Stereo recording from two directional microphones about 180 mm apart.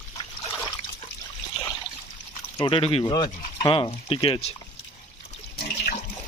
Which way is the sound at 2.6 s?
30° left (ahead or behind).